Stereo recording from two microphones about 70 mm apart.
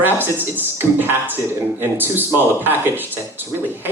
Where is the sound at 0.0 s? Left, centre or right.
Right.